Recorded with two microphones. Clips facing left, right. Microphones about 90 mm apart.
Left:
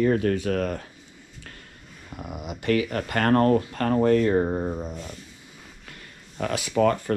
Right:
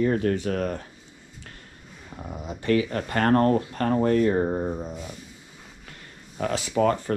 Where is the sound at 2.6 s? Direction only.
25° right (ahead or behind).